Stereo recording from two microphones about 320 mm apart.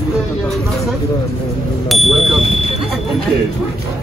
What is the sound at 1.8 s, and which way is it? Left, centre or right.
Speech, centre.